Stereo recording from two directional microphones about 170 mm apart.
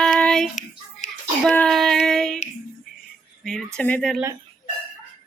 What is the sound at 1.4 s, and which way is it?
Child singing, 5° left (ahead or behind).